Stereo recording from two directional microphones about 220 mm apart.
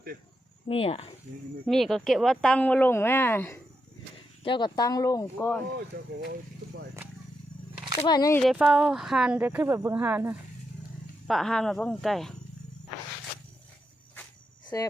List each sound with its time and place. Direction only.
0.7 s speech: 25° left (ahead or behind)
1.6 s a woman's voice: centre (ahead or behind)
4.4 s speech: 20° left (ahead or behind)
8.0 s speech: 15° left (ahead or behind)
8.4 s a woman's voice: 5° right (ahead or behind)
14.7 s speech: 15° left (ahead or behind)